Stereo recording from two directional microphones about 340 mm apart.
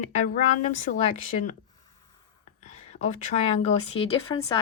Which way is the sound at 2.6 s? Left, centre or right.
Centre.